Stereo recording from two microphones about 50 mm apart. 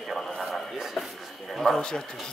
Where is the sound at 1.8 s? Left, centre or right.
Centre.